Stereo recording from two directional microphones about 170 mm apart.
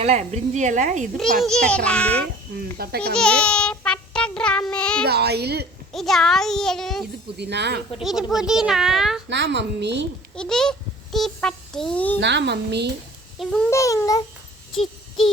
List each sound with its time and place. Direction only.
0.0 s a woman's voice: 40° right (ahead or behind)
1.4 s a child's voice: 5° left (ahead or behind)
2.7 s a woman's voice: 65° right (ahead or behind)
3.2 s child singing: 5° left (ahead or behind)
5.0 s a woman's voice: 75° right (ahead or behind)
5.9 s a child's voice: centre (ahead or behind)
7.3 s a woman's voice: 80° right
8.0 s a child's voice: 5° right (ahead or behind)
9.3 s a woman's voice: 90° right
10.3 s a child's voice: 5° left (ahead or behind)
12.2 s a woman's voice: 90° right
13.4 s a child's voice: centre (ahead or behind)
13.7 s a child's voice: 20° left (ahead or behind)